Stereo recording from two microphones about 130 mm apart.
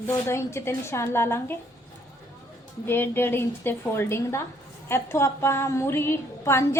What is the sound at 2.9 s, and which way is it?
A woman's voice, 15° left (ahead or behind).